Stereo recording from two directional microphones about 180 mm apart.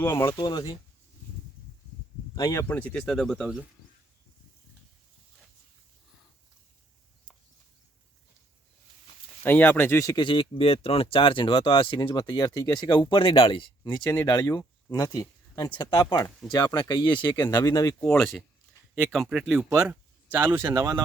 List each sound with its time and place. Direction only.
0.0 s speech: 15° left (ahead or behind)
2.3 s speech: 20° left (ahead or behind); by 3.6 s centre (ahead or behind)
9.4 s speech: 10° left (ahead or behind)
18.0 s speech: 5° left (ahead or behind); by 20.9 s 15° right (ahead or behind)